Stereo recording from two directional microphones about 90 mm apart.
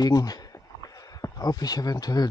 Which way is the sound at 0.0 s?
45° left (ahead or behind).